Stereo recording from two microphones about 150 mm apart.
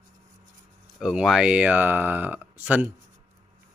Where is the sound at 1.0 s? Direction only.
5° right (ahead or behind).